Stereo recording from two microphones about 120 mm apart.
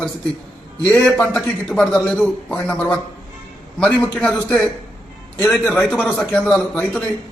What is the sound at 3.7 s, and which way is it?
A man's voice, 10° left (ahead or behind).